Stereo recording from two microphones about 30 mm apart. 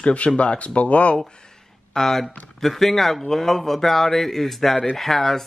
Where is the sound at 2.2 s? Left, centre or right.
Centre.